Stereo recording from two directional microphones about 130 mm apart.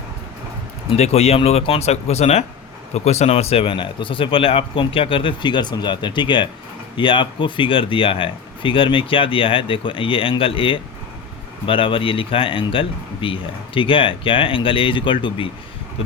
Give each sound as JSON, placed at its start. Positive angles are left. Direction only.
{"t": 0.9, "sound": "speech", "side_deg": 55}